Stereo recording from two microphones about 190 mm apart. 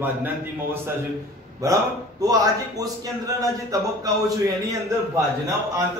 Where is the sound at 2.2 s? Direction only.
20° right (ahead or behind).